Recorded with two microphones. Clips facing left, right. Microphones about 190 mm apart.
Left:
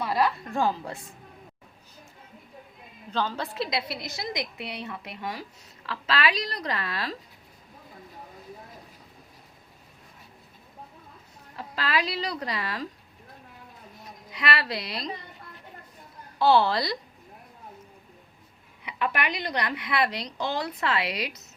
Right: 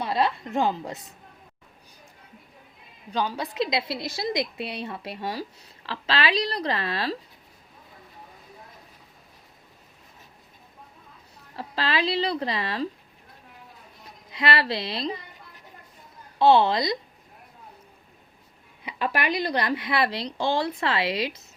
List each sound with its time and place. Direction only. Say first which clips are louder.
0.0 s a woman's voice: right 1 dB; 25° right (ahead or behind)
3.1 s a woman's voice: right 1 dB; 15° right (ahead or behind); by 7.2 s 30° right (ahead or behind)
11.5 s a woman's voice: right 1 dB; 30° right (ahead or behind)
14.3 s a woman's voice: right 3 dB; 30° right (ahead or behind)
16.4 s a woman's voice: right 3 dB; 20° right (ahead or behind)
18.9 s a woman's voice: right 2 dB; 30° right (ahead or behind)